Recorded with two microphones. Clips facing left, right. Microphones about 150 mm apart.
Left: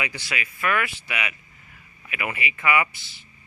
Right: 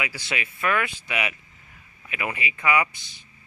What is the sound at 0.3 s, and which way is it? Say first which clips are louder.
Speech: right 1 dB; 25° right (ahead or behind).